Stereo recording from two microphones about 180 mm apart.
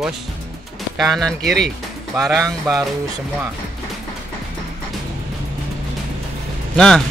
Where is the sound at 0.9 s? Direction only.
Centre (ahead or behind).